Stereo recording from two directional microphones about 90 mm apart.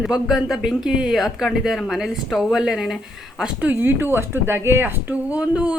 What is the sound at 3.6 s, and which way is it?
Speech, 25° right (ahead or behind).